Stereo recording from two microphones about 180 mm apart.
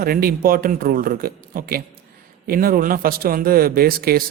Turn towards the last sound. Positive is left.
turn(degrees=-55)  # may be behind; listen again after turning